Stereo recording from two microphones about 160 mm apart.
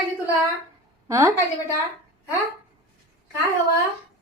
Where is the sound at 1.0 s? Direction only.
20° right (ahead or behind).